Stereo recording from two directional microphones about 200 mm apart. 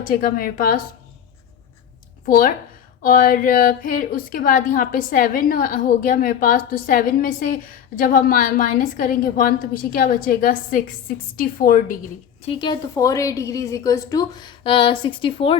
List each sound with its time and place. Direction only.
0.0 s a woman's voice: 45° left (ahead or behind)
2.2 s a woman's voice: 45° left (ahead or behind)
12.5 s a woman's voice: 25° left (ahead or behind)